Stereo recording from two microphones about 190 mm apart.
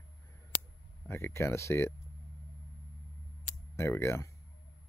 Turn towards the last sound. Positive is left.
turn(degrees=15)  # may be behind; listen again after turning